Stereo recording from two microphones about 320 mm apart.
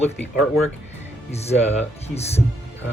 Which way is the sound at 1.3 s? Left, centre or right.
Centre.